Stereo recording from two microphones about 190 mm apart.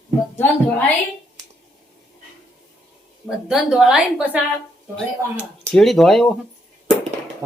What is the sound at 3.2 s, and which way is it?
A woman's voice, centre (ahead or behind).